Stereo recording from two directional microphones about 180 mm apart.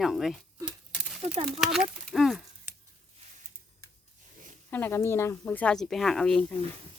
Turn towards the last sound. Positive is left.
turn(degrees=5)  # may be behind; listen again after turning